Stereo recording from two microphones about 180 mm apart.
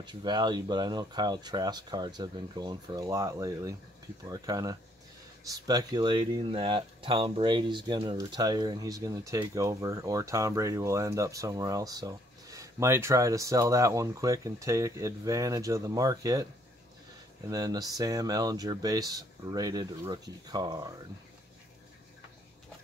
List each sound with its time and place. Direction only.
0.0 s speech: 25° right (ahead or behind)
17.5 s speech: 20° right (ahead or behind)